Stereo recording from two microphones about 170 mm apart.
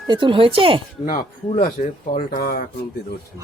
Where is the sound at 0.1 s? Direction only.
30° right (ahead or behind).